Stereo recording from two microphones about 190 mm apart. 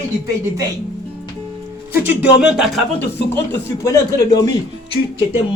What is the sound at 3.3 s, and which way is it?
Speech, 15° left (ahead or behind).